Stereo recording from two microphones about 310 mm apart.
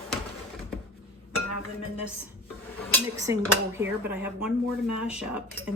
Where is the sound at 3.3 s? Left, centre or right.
Centre.